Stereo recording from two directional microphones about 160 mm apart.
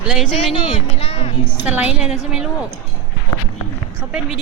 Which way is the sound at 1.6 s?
10° right (ahead or behind).